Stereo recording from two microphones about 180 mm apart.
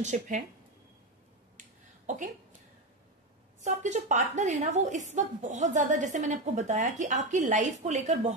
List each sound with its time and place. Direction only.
0.0 s a woman's voice: 40° right (ahead or behind)
1.6 s a sound: 45° right (ahead or behind)
3.6 s a woman's voice: 40° right (ahead or behind)